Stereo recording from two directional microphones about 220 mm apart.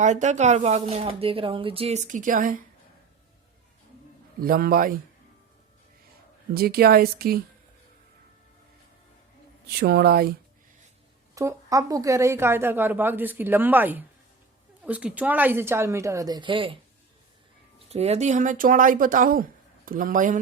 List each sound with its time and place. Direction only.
0.0 s speech: 35° right (ahead or behind)
4.4 s a man's voice: 40° right (ahead or behind)
6.5 s speech: 45° right (ahead or behind)
9.8 s speech: 45° right (ahead or behind)
11.3 s a woman's voice: 15° right (ahead or behind)
17.7 s speech: 30° right (ahead or behind)